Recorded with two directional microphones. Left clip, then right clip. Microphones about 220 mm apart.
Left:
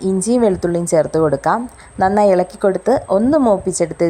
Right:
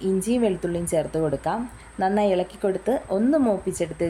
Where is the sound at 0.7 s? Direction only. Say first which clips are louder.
Left 9 dB; 10° left (ahead or behind).